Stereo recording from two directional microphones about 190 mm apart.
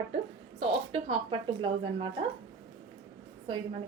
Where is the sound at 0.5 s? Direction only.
30° right (ahead or behind).